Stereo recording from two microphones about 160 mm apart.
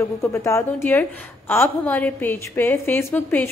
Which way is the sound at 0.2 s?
20° left (ahead or behind).